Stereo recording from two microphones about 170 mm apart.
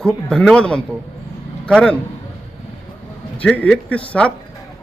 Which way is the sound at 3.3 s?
10° left (ahead or behind).